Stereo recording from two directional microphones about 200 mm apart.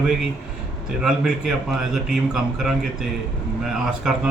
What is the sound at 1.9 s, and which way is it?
Speech, centre (ahead or behind).